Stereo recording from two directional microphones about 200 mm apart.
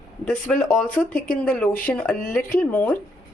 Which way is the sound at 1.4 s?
5° left (ahead or behind).